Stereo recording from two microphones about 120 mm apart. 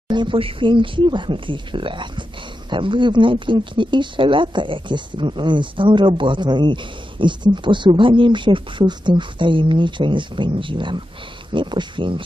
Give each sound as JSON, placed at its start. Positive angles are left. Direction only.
{"t": 0.1, "sound": "speech", "side_deg": -40}